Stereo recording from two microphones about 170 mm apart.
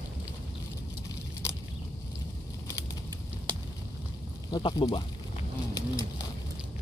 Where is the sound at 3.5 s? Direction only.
30° right (ahead or behind).